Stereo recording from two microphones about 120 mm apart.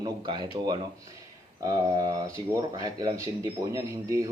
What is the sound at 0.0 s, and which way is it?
A man's voice, 35° right (ahead or behind).